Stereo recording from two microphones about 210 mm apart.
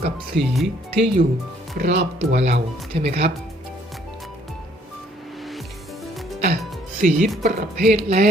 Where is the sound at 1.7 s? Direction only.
55° right (ahead or behind).